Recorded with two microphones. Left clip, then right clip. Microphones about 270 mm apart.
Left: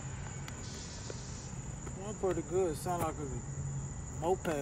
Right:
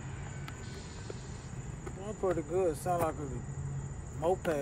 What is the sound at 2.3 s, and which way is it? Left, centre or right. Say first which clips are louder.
Speech: right 2 dB; centre.